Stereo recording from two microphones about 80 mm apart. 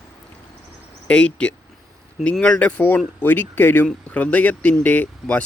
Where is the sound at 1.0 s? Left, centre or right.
Centre.